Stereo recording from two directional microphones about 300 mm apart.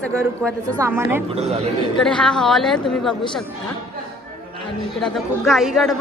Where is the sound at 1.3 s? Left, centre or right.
Centre.